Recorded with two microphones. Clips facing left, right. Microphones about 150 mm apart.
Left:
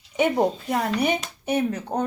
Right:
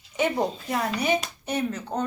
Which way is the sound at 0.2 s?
55° left (ahead or behind).